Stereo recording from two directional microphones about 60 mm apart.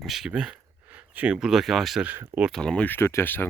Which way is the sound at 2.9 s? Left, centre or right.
Left.